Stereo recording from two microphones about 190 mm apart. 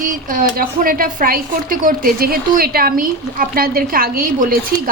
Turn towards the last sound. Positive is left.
turn(degrees=-50)  # may be behind; listen again after turning